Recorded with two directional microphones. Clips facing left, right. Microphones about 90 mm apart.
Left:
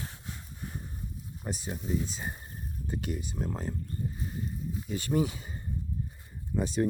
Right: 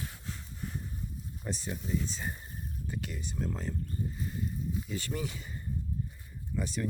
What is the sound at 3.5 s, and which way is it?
Speech, 35° left (ahead or behind).